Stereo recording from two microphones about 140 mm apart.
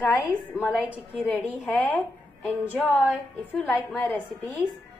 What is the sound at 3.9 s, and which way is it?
Speech, 15° left (ahead or behind).